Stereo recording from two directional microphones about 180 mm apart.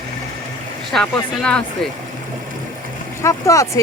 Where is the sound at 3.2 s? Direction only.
15° left (ahead or behind).